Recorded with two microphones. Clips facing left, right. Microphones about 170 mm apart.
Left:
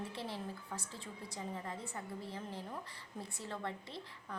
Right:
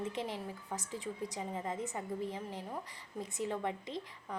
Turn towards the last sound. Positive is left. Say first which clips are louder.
# right 6 dB
turn(degrees=-15)  # may be behind; listen again after turning